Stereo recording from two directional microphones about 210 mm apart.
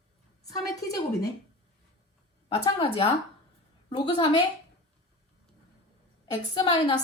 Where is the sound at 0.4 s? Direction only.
15° left (ahead or behind).